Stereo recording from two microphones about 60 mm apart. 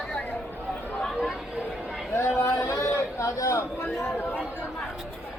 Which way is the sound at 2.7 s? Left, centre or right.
Left.